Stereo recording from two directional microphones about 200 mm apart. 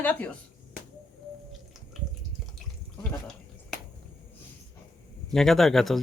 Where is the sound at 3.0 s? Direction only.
Centre (ahead or behind).